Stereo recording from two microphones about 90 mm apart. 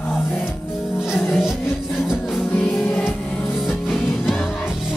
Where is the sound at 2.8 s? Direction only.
15° left (ahead or behind).